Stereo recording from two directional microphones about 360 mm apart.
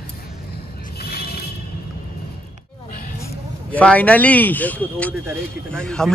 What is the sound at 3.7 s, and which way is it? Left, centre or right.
A man's voice, centre.